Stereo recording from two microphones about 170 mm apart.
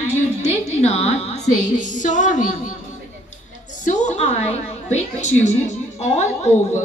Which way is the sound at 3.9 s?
45° left (ahead or behind).